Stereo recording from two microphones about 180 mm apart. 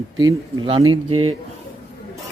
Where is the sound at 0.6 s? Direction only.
30° right (ahead or behind).